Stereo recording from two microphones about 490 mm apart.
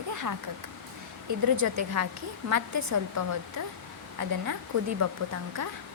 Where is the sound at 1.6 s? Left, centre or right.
Right.